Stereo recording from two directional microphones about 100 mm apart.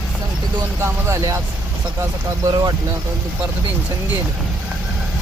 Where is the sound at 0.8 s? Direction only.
30° right (ahead or behind).